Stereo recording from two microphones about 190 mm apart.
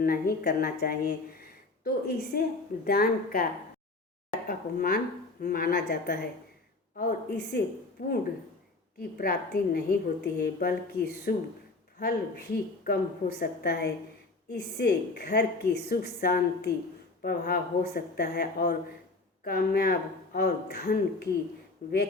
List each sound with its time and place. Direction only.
0.0 s a woman's voice: 50° left (ahead or behind)
1.4 s a sound: 55° left (ahead or behind)
2.8 s a woman's voice: 50° left (ahead or behind)
8.0 s a woman's voice: 50° left (ahead or behind)